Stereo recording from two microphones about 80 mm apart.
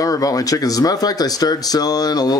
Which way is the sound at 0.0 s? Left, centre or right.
Left.